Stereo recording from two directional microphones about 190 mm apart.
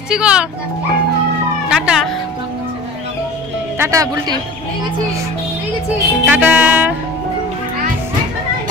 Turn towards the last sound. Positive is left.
turn(degrees=-10)  # may be behind; listen again after turning